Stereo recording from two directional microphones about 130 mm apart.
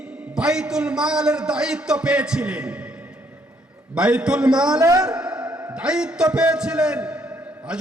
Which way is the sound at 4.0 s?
10° right (ahead or behind).